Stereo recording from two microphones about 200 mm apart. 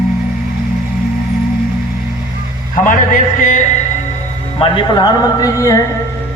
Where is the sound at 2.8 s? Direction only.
40° left (ahead or behind).